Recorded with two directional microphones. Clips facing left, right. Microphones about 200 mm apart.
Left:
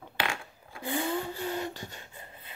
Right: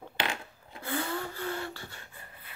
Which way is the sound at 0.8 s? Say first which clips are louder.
Left 3 dB; 15° left (ahead or behind).